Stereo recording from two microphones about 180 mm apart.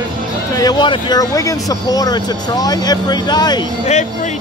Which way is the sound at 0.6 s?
25° left (ahead or behind).